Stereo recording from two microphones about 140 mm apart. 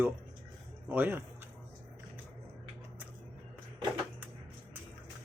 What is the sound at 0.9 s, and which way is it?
Speech, 15° right (ahead or behind).